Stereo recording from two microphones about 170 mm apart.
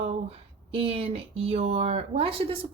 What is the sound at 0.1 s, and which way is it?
Speech, 35° right (ahead or behind).